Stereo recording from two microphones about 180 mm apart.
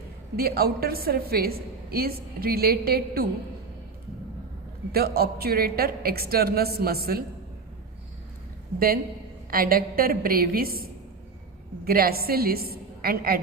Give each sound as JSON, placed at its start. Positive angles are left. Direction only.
{"t": 0.3, "sound": "a woman's voice", "side_deg": -60}
{"t": 4.9, "sound": "a woman's voice", "side_deg": -60}
{"t": 9.5, "sound": "a woman's voice", "side_deg": -55}
{"t": 11.9, "sound": "a woman's voice", "side_deg": -55}